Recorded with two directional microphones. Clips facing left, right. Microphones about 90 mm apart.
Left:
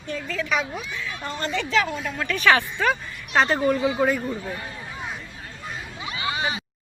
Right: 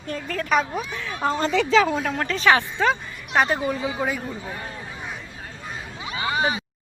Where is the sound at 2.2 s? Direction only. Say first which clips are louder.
Left 1 dB; 25° right (ahead or behind).